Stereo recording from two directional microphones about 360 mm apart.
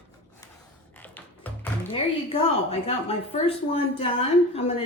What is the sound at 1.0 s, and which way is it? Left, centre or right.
Music, centre.